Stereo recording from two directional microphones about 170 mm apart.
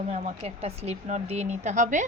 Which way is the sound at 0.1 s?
40° right (ahead or behind).